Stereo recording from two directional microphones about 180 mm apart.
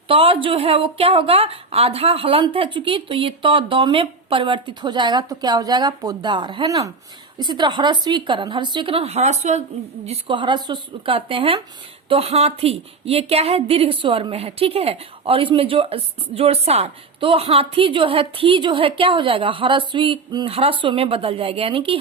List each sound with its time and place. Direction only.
0.1 s a woman's voice: 30° right (ahead or behind)
10.1 s a woman's voice: 25° right (ahead or behind)